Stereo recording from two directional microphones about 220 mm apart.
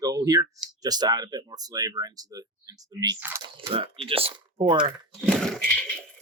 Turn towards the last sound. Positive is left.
turn(degrees=5)  # may be behind; listen again after turning